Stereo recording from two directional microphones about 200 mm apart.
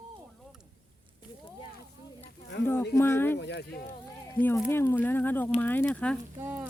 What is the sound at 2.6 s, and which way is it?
Speech, 10° left (ahead or behind).